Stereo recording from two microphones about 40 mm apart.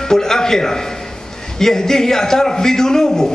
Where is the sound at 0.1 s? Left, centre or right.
Centre.